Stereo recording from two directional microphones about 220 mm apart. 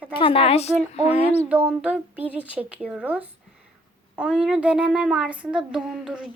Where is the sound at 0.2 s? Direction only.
25° left (ahead or behind).